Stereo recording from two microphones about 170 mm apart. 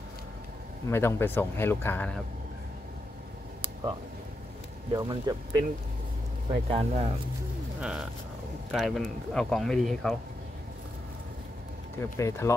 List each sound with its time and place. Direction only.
0.8 s speech: 15° left (ahead or behind)
4.9 s speech: 25° right (ahead or behind)
6.7 s speech: 35° right (ahead or behind)
7.8 s speech: 5° right (ahead or behind)
12.0 s speech: 15° left (ahead or behind)